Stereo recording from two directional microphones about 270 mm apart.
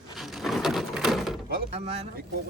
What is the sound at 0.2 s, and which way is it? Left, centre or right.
Wood, centre.